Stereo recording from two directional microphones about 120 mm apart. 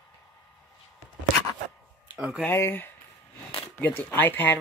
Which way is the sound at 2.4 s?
20° left (ahead or behind).